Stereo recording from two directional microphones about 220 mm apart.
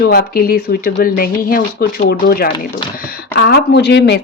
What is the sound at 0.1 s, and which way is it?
A woman's voice, 40° left (ahead or behind).